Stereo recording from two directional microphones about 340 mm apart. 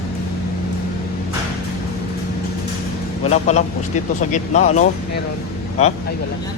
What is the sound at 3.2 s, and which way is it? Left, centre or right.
Speech, centre.